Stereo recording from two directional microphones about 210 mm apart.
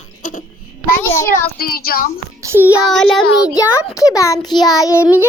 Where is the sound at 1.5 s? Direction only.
45° left (ahead or behind).